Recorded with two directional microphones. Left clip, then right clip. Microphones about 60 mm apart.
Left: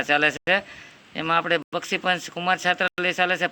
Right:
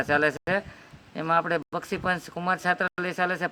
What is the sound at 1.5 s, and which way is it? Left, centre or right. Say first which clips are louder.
Speech: left 4 dB; centre.